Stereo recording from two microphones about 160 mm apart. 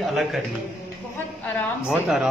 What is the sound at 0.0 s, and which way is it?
Speech, centre (ahead or behind).